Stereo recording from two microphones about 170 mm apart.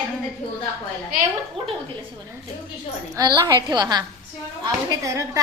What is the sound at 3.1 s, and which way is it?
A woman's voice, 20° right (ahead or behind).